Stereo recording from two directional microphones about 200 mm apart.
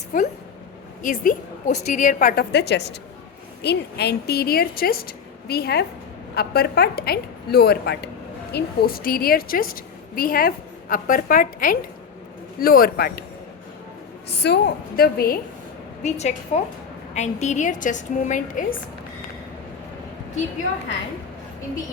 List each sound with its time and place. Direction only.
0.1 s a woman's voice: 45° left (ahead or behind)
14.3 s a woman's voice: 55° left (ahead or behind)
16.0 s a woman's voice: 35° left (ahead or behind)